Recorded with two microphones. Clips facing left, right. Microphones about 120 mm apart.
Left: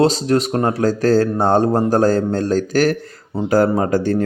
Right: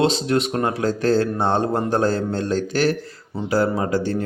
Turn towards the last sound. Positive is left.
turn(degrees=50)  # may be behind; listen again after turning